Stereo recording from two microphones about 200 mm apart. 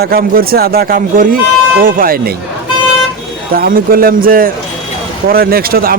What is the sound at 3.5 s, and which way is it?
A man's voice, 45° right (ahead or behind).